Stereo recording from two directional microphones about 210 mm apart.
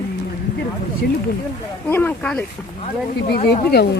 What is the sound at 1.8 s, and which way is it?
Speech, 10° left (ahead or behind).